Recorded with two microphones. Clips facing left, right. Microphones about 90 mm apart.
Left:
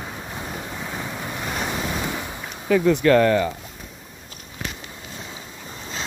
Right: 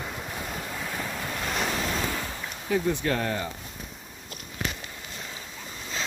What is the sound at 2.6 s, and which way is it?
Speech, 90° left.